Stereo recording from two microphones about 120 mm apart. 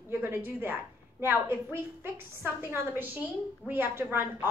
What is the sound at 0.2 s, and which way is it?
A woman's voice, 15° right (ahead or behind).